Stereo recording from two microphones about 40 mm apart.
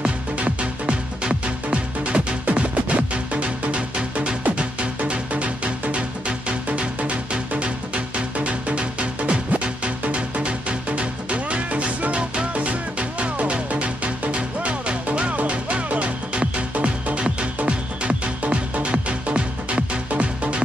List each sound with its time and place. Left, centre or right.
0.0 s music: right